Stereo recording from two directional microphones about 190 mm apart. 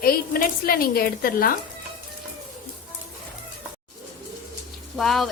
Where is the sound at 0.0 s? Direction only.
50° left (ahead or behind).